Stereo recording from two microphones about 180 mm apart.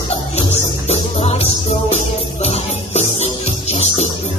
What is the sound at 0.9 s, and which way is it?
Music, 35° left (ahead or behind).